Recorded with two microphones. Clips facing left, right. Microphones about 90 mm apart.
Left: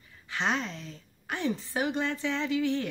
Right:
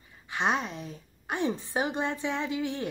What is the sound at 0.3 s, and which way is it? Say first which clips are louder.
A woman's voice: right 2 dB; 20° right (ahead or behind).